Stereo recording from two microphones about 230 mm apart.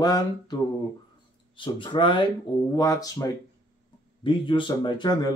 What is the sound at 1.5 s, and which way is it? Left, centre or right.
Speech, left.